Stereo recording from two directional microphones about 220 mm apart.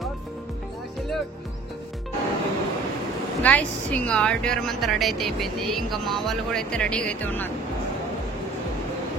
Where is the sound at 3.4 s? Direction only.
5° left (ahead or behind).